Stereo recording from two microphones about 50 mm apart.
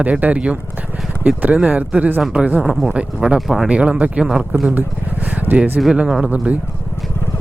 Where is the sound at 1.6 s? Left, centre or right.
Right.